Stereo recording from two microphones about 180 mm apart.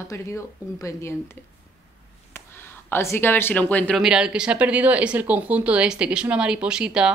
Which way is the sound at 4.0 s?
5° right (ahead or behind).